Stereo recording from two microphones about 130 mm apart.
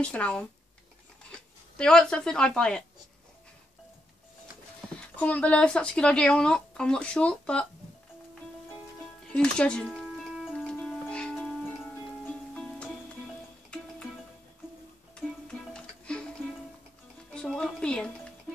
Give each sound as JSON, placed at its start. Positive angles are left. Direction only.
{"t": 0.0, "sound": "speech", "side_deg": 10}
{"t": 5.1, "sound": "speech", "side_deg": 10}
{"t": 9.3, "sound": "music", "side_deg": 10}
{"t": 12.5, "sound": "music", "side_deg": 10}
{"t": 15.7, "sound": "music", "side_deg": 5}
{"t": 17.3, "sound": "music", "side_deg": 5}